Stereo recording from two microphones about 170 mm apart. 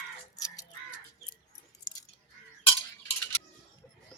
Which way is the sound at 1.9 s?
20° left (ahead or behind).